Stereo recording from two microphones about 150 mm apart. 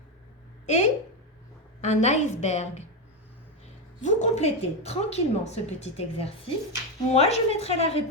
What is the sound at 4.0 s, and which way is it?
A woman's voice, 50° left (ahead or behind).